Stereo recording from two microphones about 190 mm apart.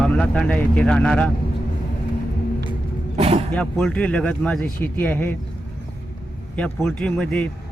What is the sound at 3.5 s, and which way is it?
Speech, 5° left (ahead or behind).